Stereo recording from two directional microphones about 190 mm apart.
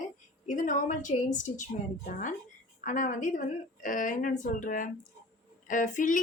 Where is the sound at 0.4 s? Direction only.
40° left (ahead or behind).